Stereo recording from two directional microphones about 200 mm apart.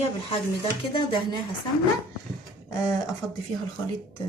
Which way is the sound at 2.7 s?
15° left (ahead or behind).